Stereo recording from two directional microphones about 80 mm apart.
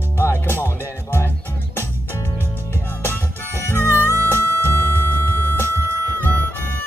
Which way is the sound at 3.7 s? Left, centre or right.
Left.